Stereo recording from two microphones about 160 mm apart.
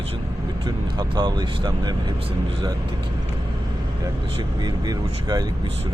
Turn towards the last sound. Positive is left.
turn(degrees=-25)  # may be behind; listen again after turning